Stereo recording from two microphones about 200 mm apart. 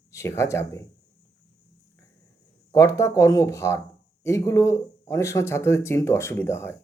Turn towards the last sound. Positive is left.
turn(degrees=10)  # may be behind; listen again after turning